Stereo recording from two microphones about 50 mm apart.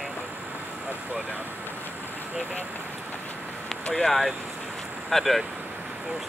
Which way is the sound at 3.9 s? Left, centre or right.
Centre.